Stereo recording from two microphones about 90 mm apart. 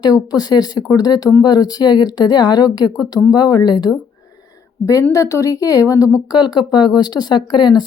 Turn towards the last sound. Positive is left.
turn(degrees=55)  # may be behind; listen again after turning